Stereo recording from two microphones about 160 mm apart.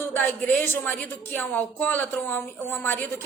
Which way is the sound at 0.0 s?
10° left (ahead or behind).